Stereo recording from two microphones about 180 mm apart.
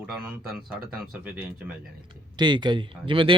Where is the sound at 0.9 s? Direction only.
5° right (ahead or behind).